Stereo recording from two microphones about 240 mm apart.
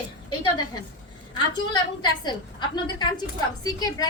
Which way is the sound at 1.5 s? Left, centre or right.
Centre.